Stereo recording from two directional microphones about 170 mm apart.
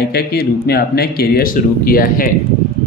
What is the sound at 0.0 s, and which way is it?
Speech, 70° left (ahead or behind).